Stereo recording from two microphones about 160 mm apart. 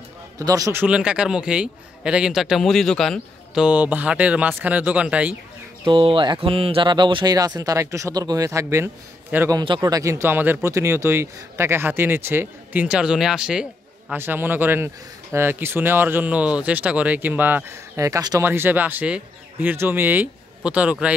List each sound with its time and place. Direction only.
0.4 s speech: 20° right (ahead or behind)
0.8 s a man's voice: 5° right (ahead or behind)
5.9 s speech: 30° right (ahead or behind); by 9.6 s 15° right (ahead or behind)
9.6 s speech: 25° right (ahead or behind); by 21.1 s 10° right (ahead or behind)